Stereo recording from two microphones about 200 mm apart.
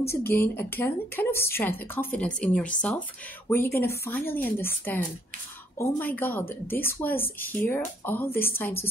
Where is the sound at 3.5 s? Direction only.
10° left (ahead or behind).